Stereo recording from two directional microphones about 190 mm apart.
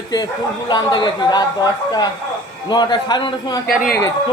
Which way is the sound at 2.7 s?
20° left (ahead or behind).